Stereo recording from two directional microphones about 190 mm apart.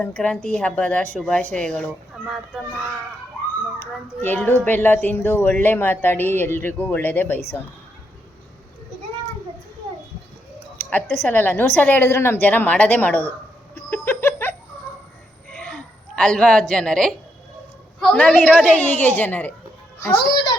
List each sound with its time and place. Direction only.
0.0 s speech: 5° left (ahead or behind)
4.2 s speech: 10° left (ahead or behind)
11.2 s speech: 10° left (ahead or behind)
13.7 s a sound: 10° left (ahead or behind)
18.0 s speech: 5° left (ahead or behind)